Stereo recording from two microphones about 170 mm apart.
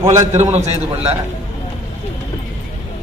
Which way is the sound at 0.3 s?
40° right (ahead or behind).